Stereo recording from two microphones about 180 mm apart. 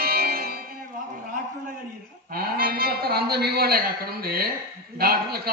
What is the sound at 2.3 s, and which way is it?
A man's voice, 55° right (ahead or behind).